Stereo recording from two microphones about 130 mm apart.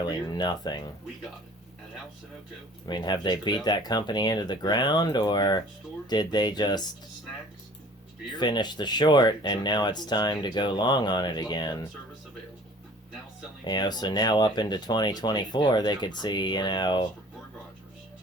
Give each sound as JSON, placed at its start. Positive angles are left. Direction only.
{"t": 0.0, "sound": "speech", "side_deg": 30}
{"t": 2.8, "sound": "speech", "side_deg": 35}
{"t": 8.4, "sound": "speech", "side_deg": 35}
{"t": 13.7, "sound": "speech", "side_deg": 30}